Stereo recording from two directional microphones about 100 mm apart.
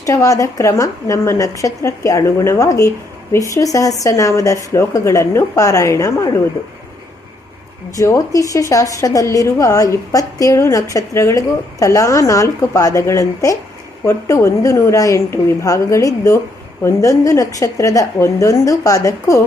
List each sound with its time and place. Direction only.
0.0 s a woman's voice: 35° left (ahead or behind)
7.9 s a woman's voice: 30° left (ahead or behind)